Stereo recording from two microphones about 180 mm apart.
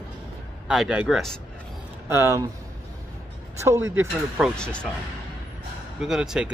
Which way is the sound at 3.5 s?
15° right (ahead or behind).